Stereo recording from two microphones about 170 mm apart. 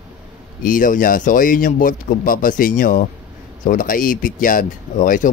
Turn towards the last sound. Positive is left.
turn(degrees=50)  # may be behind; listen again after turning